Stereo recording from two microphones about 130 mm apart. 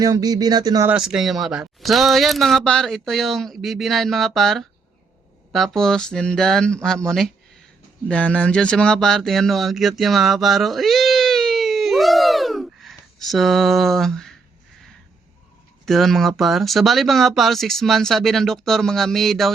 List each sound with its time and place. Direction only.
0.0 s speech: 30° right (ahead or behind)
0.9 s speech: 5° right (ahead or behind)
15.9 s speech: centre (ahead or behind)